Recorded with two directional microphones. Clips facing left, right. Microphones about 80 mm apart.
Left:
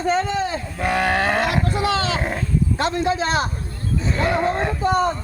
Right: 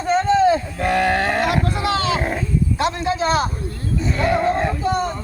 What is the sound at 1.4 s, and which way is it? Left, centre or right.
Roaring cats, left.